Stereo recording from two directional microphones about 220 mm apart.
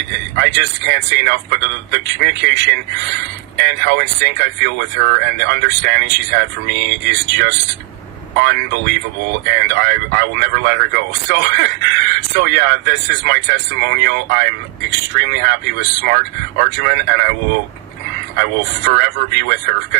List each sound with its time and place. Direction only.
0.3 s a man's voice: 50° right (ahead or behind)
18.9 s a man's voice: 50° right (ahead or behind)